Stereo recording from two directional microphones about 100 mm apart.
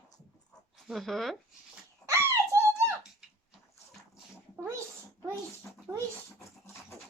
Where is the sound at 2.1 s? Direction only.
30° right (ahead or behind).